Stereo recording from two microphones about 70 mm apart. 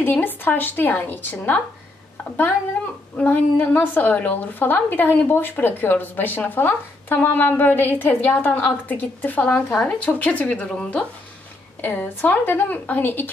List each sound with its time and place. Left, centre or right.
0.0 s a woman's voice: left
3.2 s a woman's voice: left
11.8 s a woman's voice: left